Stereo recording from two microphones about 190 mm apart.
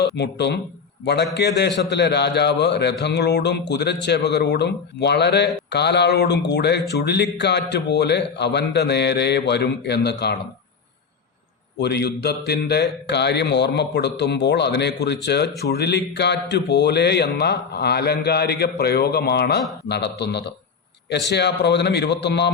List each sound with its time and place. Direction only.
0.0 s a man's voice: 60° left (ahead or behind)
11.8 s a man's voice: 60° left (ahead or behind)